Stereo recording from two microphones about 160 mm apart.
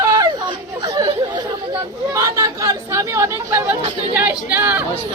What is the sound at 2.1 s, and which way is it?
Speech, 20° right (ahead or behind).